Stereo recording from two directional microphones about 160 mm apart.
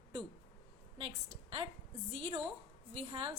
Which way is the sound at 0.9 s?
30° right (ahead or behind).